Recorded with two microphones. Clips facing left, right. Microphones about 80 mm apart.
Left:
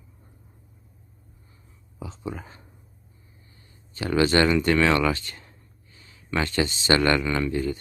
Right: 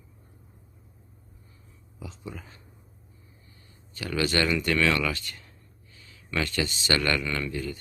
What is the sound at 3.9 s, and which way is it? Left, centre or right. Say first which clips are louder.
Speech: left 6 dB; left.